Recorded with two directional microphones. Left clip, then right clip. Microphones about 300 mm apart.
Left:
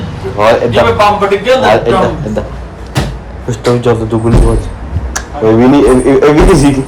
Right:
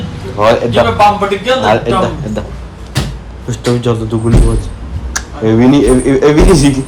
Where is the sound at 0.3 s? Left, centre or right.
Centre.